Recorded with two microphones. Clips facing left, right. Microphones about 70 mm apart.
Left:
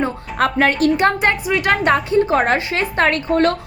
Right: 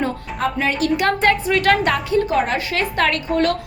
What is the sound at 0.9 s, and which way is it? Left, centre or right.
Speech, left.